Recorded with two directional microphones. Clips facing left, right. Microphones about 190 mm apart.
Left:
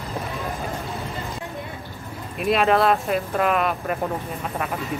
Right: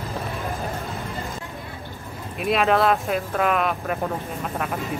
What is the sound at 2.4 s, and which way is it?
Speech, centre (ahead or behind).